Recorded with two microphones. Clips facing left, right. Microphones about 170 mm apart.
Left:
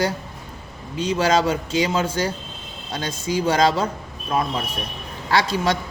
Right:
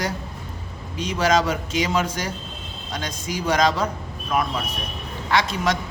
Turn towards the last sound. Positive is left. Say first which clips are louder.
# left 2 dB
turn(degrees=30)  # may be behind; listen again after turning